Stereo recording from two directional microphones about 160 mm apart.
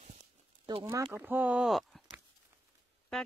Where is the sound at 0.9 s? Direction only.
15° right (ahead or behind).